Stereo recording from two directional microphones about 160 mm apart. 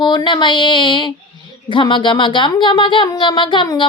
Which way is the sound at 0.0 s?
30° left (ahead or behind).